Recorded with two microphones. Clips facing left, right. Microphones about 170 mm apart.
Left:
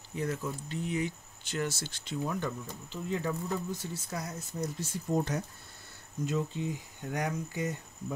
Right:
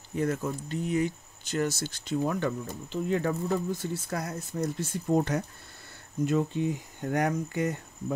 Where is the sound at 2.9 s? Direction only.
60° right (ahead or behind).